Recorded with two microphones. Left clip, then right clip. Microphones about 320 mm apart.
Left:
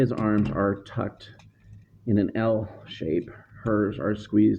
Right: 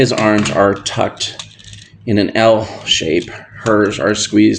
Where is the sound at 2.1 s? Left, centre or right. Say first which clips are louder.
Right 13 dB; left.